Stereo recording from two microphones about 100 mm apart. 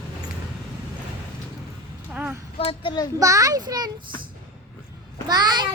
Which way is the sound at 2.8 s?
45° left (ahead or behind).